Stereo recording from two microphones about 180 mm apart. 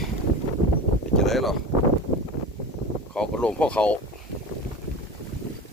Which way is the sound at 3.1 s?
5° left (ahead or behind).